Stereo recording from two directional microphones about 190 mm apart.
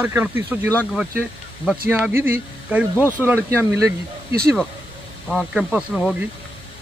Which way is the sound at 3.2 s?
10° right (ahead or behind).